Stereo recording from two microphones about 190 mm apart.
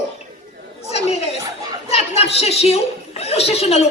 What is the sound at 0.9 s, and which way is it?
Chatter, 35° left (ahead or behind).